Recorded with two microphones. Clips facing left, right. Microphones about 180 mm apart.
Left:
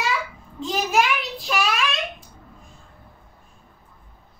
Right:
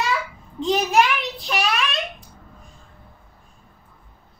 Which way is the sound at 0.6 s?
Centre (ahead or behind).